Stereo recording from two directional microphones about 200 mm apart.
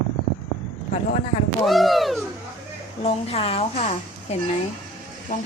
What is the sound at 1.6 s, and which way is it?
Speech, centre (ahead or behind).